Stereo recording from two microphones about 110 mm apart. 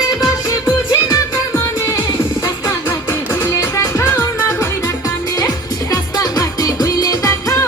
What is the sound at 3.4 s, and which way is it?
Music, 20° left (ahead or behind).